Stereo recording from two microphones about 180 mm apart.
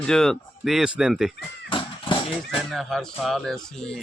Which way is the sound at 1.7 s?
25° left (ahead or behind).